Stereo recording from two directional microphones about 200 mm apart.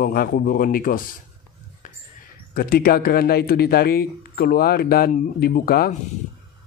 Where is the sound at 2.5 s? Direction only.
45° left (ahead or behind).